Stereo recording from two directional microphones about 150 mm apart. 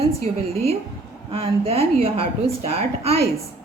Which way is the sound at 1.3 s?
40° right (ahead or behind).